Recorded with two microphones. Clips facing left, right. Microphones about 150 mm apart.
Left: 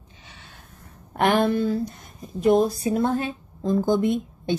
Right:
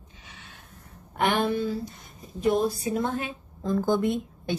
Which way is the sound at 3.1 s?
35° left (ahead or behind).